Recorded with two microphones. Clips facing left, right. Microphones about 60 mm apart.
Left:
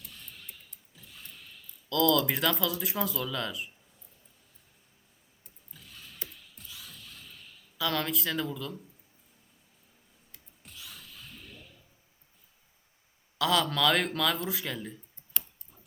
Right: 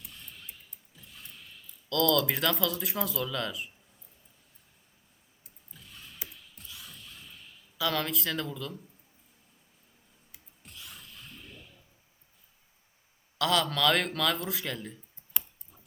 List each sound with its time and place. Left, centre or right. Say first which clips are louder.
0.0 s music: even; centre
0.9 s creak: even; centre
1.9 s speech: left 1 dB; centre
5.7 s a sound: even; centre
7.8 s speech: even; centre
10.3 s a sound: even; centre
13.4 s speech: even; centre
15.3 s tick-tock: even; centre